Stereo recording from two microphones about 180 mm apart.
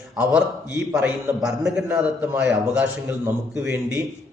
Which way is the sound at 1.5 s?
5° right (ahead or behind).